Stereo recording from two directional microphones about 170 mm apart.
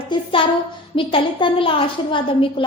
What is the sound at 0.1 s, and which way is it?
A woman's voice, 30° left (ahead or behind).